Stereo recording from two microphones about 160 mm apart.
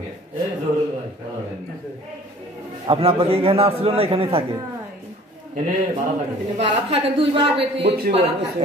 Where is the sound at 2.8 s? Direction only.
40° right (ahead or behind).